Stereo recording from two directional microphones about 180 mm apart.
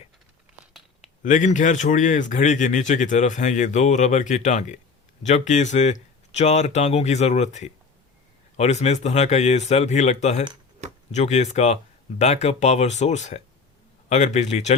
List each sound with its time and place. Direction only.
1.2 s a man's voice: 45° left (ahead or behind)